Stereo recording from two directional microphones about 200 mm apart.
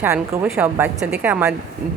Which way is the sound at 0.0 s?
10° right (ahead or behind).